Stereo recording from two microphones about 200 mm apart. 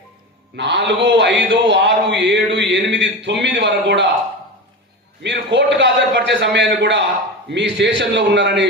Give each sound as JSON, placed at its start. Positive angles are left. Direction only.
{"t": 0.5, "sound": "a man's voice", "side_deg": -60}
{"t": 5.2, "sound": "a man's voice", "side_deg": -60}